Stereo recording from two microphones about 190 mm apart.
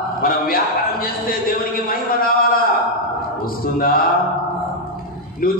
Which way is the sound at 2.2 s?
50° left (ahead or behind).